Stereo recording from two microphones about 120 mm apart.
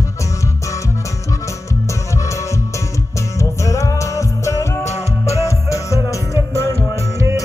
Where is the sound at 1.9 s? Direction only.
25° left (ahead or behind).